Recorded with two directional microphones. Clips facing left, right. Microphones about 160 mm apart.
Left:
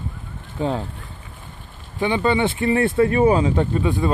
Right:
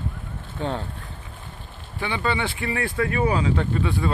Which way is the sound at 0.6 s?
10° left (ahead or behind).